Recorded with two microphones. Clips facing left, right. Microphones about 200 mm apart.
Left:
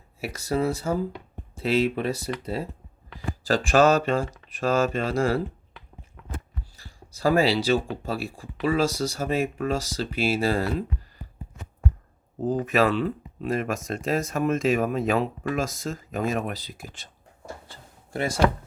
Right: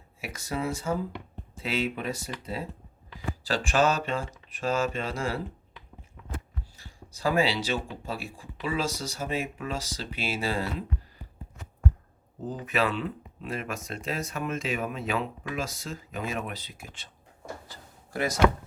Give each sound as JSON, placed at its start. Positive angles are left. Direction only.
{"t": 0.2, "sound": "speech", "side_deg": 35}
{"t": 3.4, "sound": "speech", "side_deg": 45}
{"t": 6.7, "sound": "speech", "side_deg": 40}
{"t": 12.5, "sound": "speech", "side_deg": 45}
{"t": 17.7, "sound": "drawer open or close", "side_deg": 30}